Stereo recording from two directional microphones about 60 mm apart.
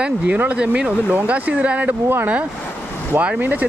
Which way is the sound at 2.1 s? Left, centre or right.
Right.